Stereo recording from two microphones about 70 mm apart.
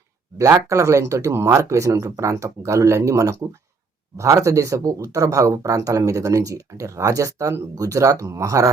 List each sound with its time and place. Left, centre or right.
0.3 s speech: right